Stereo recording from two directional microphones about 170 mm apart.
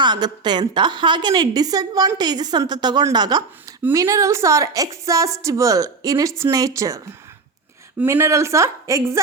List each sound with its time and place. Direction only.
0.0 s a woman's voice: 25° right (ahead or behind)